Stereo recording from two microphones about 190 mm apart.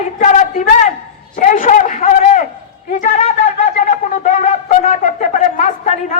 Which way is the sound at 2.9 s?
40° left (ahead or behind).